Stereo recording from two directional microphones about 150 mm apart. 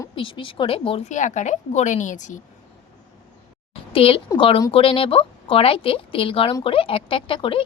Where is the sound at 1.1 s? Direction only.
55° left (ahead or behind).